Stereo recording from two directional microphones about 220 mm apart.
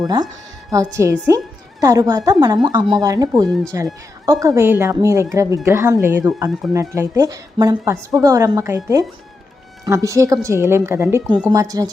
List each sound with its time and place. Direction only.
0.9 s speech: 15° right (ahead or behind)